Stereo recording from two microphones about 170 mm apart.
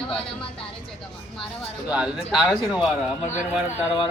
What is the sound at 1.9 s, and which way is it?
Speech, 5° right (ahead or behind).